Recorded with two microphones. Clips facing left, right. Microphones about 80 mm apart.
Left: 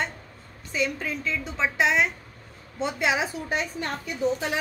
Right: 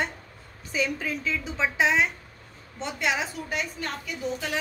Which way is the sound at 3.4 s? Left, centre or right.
Left.